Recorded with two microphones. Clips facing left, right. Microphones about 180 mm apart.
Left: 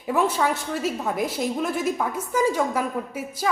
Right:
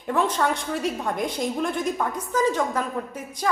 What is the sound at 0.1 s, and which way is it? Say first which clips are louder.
A woman's voice: left 1 dB; 10° left (ahead or behind).